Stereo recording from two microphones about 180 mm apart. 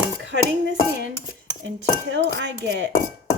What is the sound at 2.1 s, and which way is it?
Chopping, 75° right (ahead or behind).